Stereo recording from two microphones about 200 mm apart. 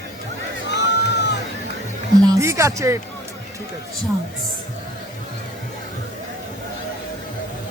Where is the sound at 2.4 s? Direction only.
15° right (ahead or behind).